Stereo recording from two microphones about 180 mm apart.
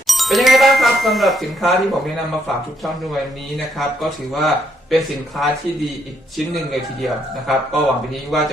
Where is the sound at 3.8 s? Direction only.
Centre (ahead or behind).